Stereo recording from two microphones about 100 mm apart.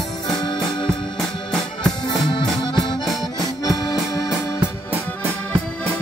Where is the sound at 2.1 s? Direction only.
50° left (ahead or behind).